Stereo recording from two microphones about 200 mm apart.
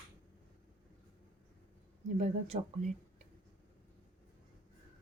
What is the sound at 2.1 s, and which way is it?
Speech, 35° right (ahead or behind).